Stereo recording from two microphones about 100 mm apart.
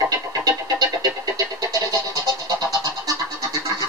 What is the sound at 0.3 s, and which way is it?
Music, 35° right (ahead or behind).